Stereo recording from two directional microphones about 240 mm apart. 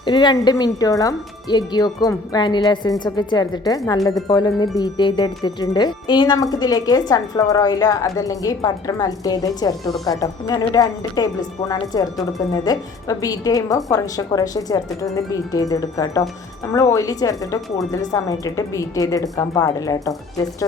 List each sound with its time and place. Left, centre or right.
0.0 s a woman's voice: centre